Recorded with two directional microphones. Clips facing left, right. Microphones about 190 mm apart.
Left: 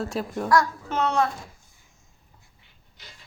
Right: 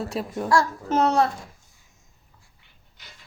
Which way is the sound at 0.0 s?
Centre (ahead or behind).